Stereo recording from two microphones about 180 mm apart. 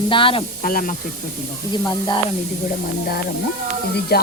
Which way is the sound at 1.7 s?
25° left (ahead or behind).